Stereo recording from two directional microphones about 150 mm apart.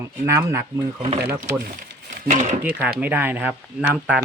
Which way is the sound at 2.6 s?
10° right (ahead or behind).